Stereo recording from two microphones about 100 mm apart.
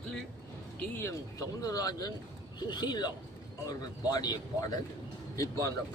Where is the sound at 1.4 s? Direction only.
35° left (ahead or behind).